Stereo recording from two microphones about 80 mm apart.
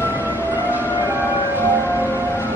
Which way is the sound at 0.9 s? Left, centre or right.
Right.